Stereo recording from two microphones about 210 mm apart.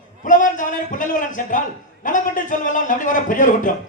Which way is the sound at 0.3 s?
35° left (ahead or behind).